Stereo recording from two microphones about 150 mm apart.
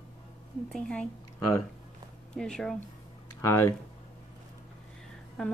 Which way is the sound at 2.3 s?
5° left (ahead or behind).